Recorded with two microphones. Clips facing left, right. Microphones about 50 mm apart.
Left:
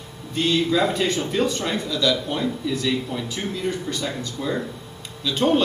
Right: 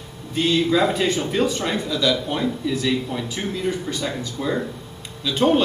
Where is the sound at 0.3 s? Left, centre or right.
Centre.